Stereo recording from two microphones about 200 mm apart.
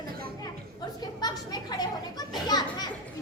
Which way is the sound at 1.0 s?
20° left (ahead or behind).